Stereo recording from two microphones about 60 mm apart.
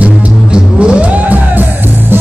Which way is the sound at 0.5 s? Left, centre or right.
Centre.